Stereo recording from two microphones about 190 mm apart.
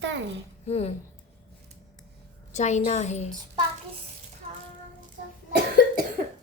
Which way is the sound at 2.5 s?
40° left (ahead or behind).